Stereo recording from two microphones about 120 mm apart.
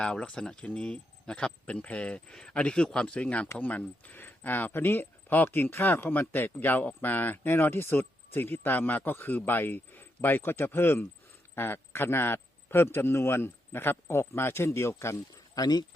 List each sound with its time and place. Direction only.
0.0 s a man's voice: 5° left (ahead or behind); by 15.9 s 35° left (ahead or behind)